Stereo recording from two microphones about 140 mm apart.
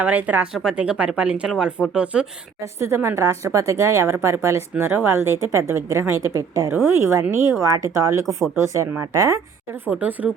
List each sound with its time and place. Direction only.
0.0 s speech: 10° right (ahead or behind)
2.7 s a woman's voice: 20° right (ahead or behind)
9.8 s speech: 10° right (ahead or behind)